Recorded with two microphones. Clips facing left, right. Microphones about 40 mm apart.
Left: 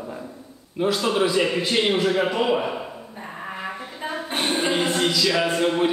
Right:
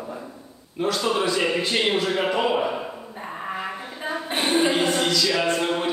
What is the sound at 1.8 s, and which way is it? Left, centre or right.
Speech, left.